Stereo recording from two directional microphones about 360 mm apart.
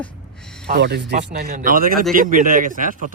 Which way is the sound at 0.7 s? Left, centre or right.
Right.